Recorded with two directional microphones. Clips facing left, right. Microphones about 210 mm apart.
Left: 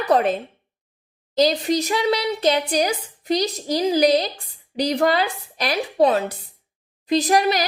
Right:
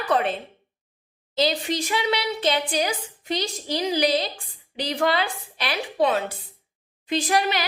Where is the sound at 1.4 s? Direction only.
40° left (ahead or behind).